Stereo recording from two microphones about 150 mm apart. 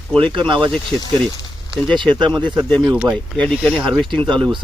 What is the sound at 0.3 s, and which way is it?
Speech, 30° right (ahead or behind).